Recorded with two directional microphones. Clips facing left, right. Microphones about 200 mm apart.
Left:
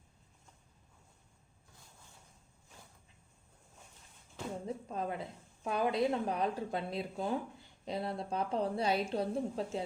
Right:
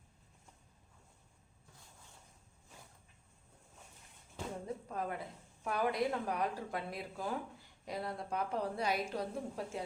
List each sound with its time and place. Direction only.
4.6 s a woman's voice: 25° left (ahead or behind)